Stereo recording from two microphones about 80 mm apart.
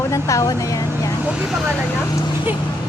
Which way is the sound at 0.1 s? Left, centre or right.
Left.